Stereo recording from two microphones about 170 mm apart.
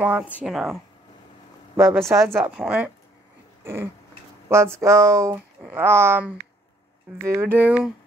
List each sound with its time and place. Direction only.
0.0 s speech: 10° right (ahead or behind)
1.8 s speech: 15° right (ahead or behind)